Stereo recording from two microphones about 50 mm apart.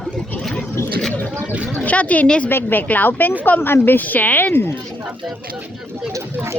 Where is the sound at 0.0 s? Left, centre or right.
Centre.